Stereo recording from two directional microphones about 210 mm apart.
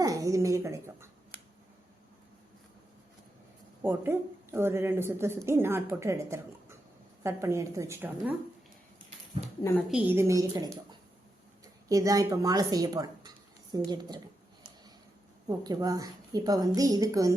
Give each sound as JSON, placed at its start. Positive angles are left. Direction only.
{"t": 0.0, "sound": "a sound", "side_deg": -15}
{"t": 3.8, "sound": "speech", "side_deg": -10}
{"t": 9.9, "sound": "speech", "side_deg": -10}
{"t": 15.4, "sound": "speech", "side_deg": -20}